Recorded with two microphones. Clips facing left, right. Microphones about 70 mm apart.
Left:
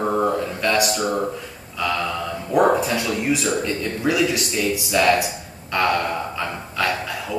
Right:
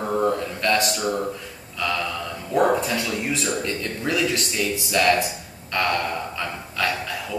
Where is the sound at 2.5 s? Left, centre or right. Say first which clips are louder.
Left 3 dB; centre.